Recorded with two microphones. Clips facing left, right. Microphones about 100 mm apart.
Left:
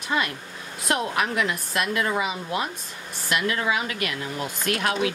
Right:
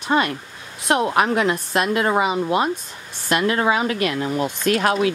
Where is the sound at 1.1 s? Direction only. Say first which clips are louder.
Right 6 dB; 35° right (ahead or behind).